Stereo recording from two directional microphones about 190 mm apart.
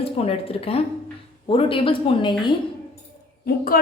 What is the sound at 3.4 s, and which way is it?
Speech, 50° left (ahead or behind).